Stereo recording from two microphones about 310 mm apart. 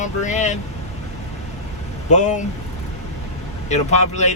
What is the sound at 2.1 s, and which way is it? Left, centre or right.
Speech, left.